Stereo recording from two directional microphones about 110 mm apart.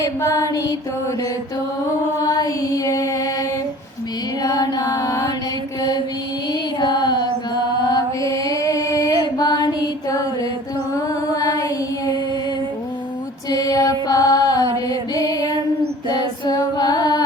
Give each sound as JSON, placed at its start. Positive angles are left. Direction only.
{"t": 0.0, "sound": "music", "side_deg": 25}
{"t": 2.2, "sound": "music", "side_deg": 35}
{"t": 4.4, "sound": "music", "side_deg": 35}
{"t": 6.5, "sound": "mantra", "side_deg": 40}
{"t": 10.9, "sound": "female singing", "side_deg": 35}
{"t": 13.5, "sound": "mantra", "side_deg": 35}
{"t": 16.0, "sound": "music", "side_deg": 40}